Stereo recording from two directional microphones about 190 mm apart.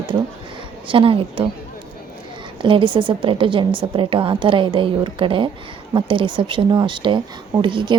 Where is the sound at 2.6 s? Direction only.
25° right (ahead or behind).